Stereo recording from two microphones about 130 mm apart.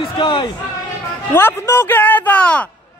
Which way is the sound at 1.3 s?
20° left (ahead or behind).